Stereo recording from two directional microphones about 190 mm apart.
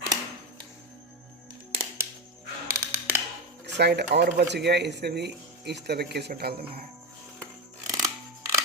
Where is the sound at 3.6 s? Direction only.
60° right (ahead or behind).